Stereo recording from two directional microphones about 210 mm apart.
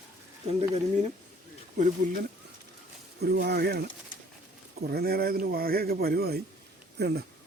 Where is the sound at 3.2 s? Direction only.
50° right (ahead or behind).